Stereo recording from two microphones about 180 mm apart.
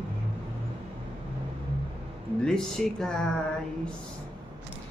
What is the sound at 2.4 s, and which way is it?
Speech, 5° left (ahead or behind).